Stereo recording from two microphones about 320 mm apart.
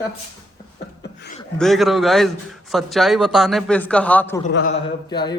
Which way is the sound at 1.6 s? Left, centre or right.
Centre.